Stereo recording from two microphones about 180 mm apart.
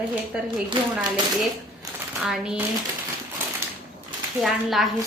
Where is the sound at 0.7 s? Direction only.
30° right (ahead or behind).